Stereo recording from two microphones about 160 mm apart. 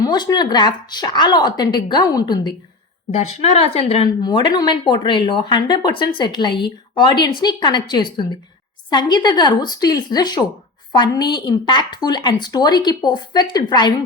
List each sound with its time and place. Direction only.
0.0 s a woman's voice: 25° left (ahead or behind)
3.1 s a woman's voice: 40° left (ahead or behind)
4.2 s a woman's voice: 30° left (ahead or behind)